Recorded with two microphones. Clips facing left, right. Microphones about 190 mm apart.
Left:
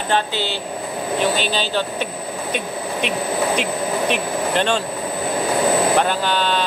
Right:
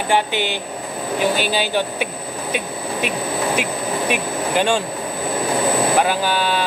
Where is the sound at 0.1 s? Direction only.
15° right (ahead or behind).